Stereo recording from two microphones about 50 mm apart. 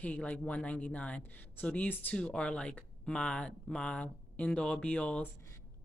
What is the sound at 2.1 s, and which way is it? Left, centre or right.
Speech, centre.